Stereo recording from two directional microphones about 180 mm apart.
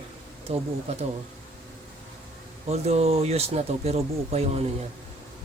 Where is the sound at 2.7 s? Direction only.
35° right (ahead or behind).